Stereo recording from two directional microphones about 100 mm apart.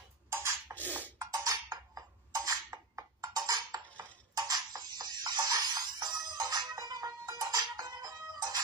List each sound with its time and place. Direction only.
0.3 s beatboxing: 25° right (ahead or behind)
0.7 s music: 20° left (ahead or behind)
1.1 s music: 35° right (ahead or behind)